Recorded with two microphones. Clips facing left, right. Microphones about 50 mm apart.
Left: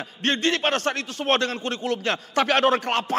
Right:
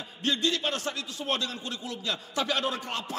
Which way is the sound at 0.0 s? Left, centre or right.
Left.